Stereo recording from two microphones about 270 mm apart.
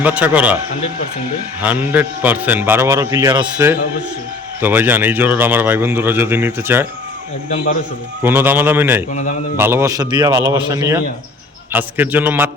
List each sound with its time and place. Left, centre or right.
0.0 s a man's voice: centre
1.6 s speech: centre
7.5 s a man's voice: left
8.2 s speech: centre